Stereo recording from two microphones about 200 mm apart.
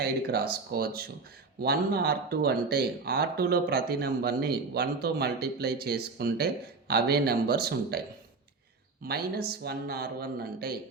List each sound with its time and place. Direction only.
0.0 s speech: 50° right (ahead or behind)
9.0 s speech: 50° right (ahead or behind)